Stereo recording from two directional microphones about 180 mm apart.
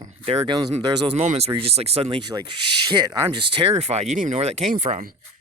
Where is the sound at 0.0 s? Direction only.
35° right (ahead or behind).